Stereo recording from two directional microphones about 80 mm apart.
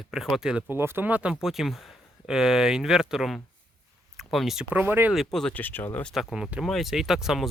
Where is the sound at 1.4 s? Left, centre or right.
Centre.